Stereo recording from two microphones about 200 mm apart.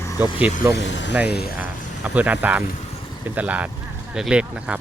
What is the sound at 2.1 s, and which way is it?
Speech, 10° right (ahead or behind).